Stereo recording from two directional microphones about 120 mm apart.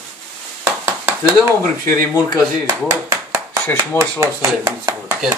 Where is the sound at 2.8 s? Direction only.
25° right (ahead or behind).